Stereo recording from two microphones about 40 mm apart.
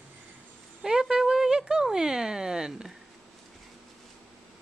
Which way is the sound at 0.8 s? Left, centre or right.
Centre.